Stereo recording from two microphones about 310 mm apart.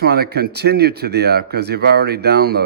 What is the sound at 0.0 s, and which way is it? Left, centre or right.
Speech, right.